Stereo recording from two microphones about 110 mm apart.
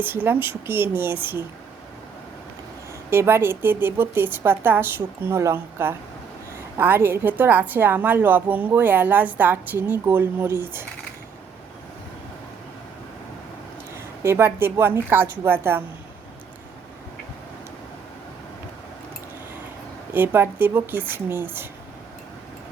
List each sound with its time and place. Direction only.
0.0 s a woman's voice: 20° right (ahead or behind)
3.1 s a woman's voice: 20° right (ahead or behind)
13.9 s a woman's voice: 25° right (ahead or behind)
20.1 s a woman's voice: 20° right (ahead or behind)